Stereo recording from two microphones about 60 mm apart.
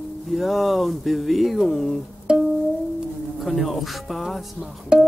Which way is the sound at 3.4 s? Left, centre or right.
Centre.